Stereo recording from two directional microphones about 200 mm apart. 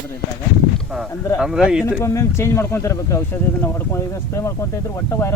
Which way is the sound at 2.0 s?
15° left (ahead or behind).